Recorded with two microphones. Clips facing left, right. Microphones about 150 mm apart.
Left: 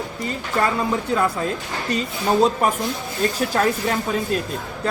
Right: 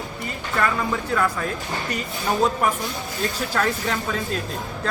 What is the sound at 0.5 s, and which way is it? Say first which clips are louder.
Speech: left 2 dB; 25° left (ahead or behind).